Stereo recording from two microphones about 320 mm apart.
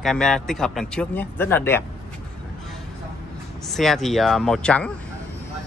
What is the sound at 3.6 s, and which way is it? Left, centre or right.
A man's voice, centre.